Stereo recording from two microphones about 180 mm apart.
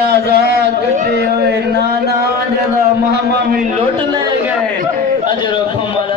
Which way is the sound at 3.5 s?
45° right (ahead or behind).